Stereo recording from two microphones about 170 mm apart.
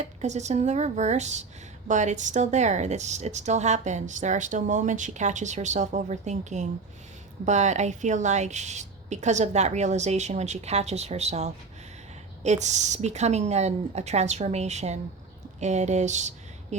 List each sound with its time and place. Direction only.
0.0 s a woman's voice: 40° right (ahead or behind)